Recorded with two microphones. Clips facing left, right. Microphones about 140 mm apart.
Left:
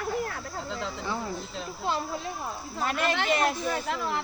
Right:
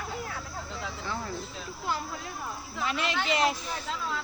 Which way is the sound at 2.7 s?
50° left (ahead or behind).